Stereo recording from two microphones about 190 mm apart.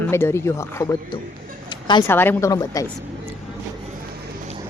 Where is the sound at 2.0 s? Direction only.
10° left (ahead or behind).